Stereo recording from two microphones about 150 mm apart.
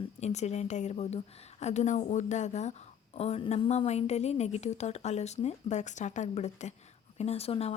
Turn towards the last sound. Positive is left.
turn(degrees=40)  # may be behind; listen again after turning